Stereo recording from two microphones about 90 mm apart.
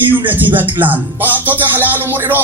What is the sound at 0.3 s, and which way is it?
Speech, 20° right (ahead or behind).